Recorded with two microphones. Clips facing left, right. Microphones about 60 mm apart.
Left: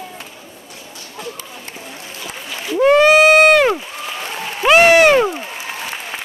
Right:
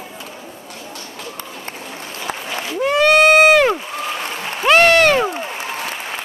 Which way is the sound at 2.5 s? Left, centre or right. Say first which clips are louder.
Even; right.